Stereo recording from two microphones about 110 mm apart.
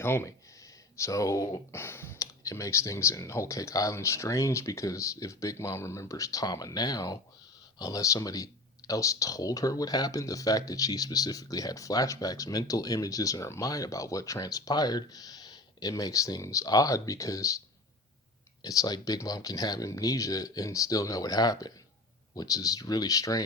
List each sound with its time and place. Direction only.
0.0 s speech: 20° left (ahead or behind)
18.6 s speech: 35° left (ahead or behind)